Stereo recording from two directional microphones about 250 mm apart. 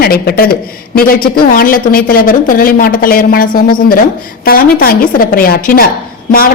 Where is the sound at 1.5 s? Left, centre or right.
Left.